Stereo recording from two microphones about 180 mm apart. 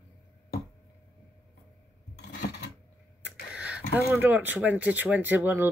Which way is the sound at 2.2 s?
70° left (ahead or behind).